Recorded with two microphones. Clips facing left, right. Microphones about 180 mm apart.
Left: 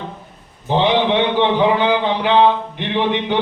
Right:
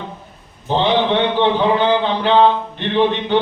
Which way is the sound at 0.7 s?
15° left (ahead or behind).